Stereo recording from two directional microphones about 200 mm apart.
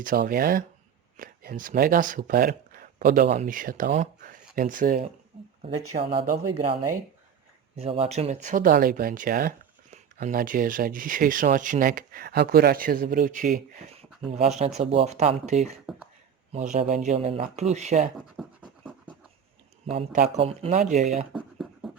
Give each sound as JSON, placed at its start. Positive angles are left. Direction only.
{"t": 0.0, "sound": "speech", "side_deg": -45}
{"t": 5.9, "sound": "speech", "side_deg": -25}
{"t": 7.8, "sound": "speech", "side_deg": -30}
{"t": 18.4, "sound": "scratch", "side_deg": 0}
{"t": 19.9, "sound": "speech", "side_deg": -30}
{"t": 21.3, "sound": "beatboxing", "side_deg": 0}